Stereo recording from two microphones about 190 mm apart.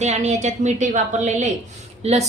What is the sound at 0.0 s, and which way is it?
A woman's voice, 35° right (ahead or behind).